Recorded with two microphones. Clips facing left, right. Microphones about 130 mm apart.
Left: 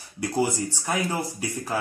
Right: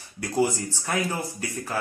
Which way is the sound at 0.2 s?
15° left (ahead or behind).